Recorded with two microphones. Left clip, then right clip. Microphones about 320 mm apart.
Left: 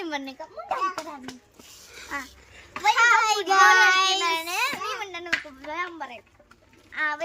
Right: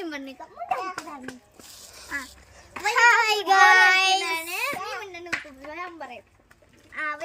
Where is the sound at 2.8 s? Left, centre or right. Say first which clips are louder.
Even; centre.